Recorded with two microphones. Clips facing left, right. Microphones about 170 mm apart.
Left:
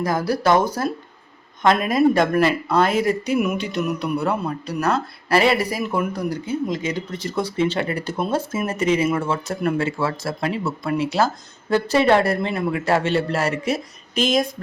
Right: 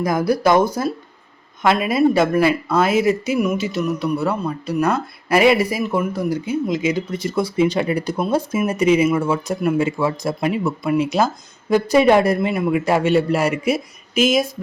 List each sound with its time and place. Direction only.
0.0 s speech: 10° right (ahead or behind)